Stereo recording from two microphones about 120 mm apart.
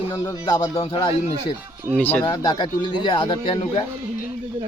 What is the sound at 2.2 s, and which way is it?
Speech, 35° left (ahead or behind).